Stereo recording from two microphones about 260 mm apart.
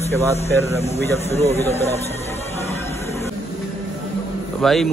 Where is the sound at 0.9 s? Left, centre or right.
Left.